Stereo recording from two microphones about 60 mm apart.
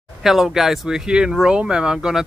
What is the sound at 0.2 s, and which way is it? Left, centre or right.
Speech, centre.